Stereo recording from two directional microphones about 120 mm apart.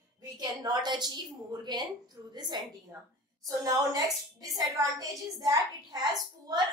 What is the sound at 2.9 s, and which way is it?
A woman's voice, 25° right (ahead or behind).